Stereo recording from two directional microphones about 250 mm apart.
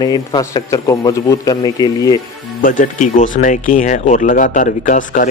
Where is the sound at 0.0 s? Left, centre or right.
Centre.